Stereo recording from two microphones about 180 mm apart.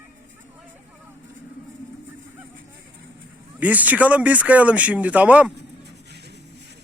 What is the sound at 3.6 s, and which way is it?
Speech, 10° right (ahead or behind).